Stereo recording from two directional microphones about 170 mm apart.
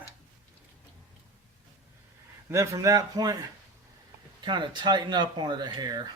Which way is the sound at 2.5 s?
15° right (ahead or behind).